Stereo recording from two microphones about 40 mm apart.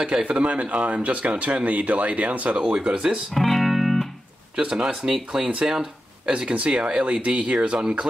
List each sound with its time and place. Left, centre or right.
0.2 s speech: right
2.7 s speech: right
3.3 s music: centre
4.6 s speech: right
6.2 s speech: right